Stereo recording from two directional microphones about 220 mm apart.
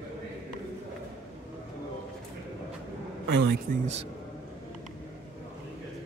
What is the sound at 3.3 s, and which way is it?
Speech, 45° right (ahead or behind).